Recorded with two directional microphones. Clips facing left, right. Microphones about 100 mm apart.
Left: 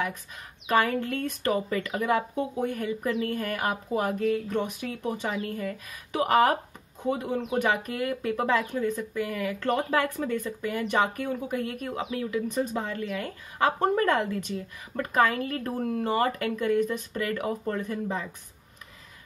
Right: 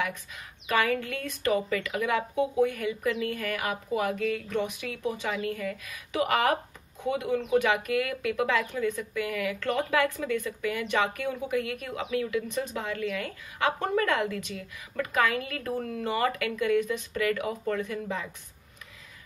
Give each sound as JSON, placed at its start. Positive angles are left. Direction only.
{"t": 0.7, "sound": "speech", "side_deg": 40}
{"t": 7.6, "sound": "speech", "side_deg": 35}